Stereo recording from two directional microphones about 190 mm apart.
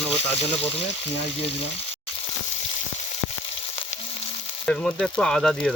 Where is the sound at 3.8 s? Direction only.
30° left (ahead or behind).